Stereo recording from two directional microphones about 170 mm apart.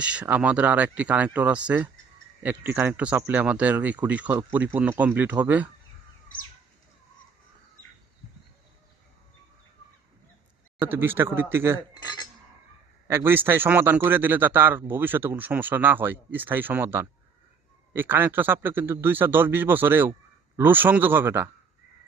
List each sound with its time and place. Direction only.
0.0 s a man's voice: 5° right (ahead or behind)
10.8 s a man's voice: 15° right (ahead or behind)
12.0 s cutlery: 25° left (ahead or behind)
13.1 s a man's voice: 15° right (ahead or behind)